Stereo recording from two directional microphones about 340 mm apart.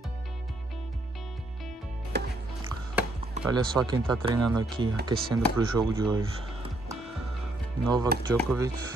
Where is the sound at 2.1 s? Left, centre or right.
Right.